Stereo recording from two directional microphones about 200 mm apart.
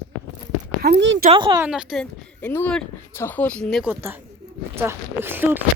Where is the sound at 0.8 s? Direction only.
55° right (ahead or behind).